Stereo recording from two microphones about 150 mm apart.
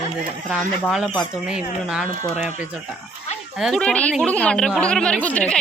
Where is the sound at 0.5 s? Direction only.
5° right (ahead or behind).